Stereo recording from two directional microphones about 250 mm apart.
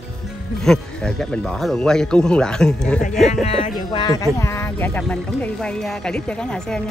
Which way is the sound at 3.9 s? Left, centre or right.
Centre.